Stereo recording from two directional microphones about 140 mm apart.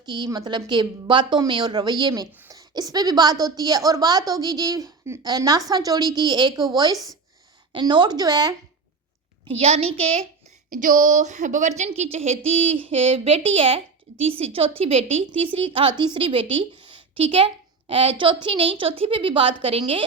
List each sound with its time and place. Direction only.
0.0 s a woman's voice: 30° right (ahead or behind)
9.6 s speech: 45° right (ahead or behind)
10.7 s a woman's voice: 70° right (ahead or behind); by 20.1 s 40° right (ahead or behind)